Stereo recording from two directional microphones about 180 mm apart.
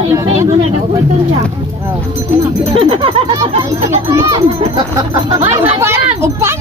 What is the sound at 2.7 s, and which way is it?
Speech, 30° right (ahead or behind).